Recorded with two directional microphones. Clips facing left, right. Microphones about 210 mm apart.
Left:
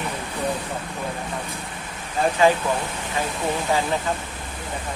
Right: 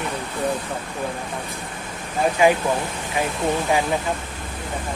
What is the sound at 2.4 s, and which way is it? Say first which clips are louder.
Speech: right 1 dB; 15° right (ahead or behind).